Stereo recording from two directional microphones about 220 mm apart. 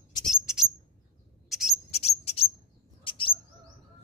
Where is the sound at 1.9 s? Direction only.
30° left (ahead or behind).